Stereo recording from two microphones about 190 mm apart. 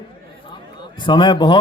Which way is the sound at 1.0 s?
25° left (ahead or behind).